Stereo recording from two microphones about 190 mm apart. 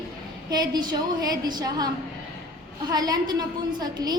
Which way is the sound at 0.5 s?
20° right (ahead or behind).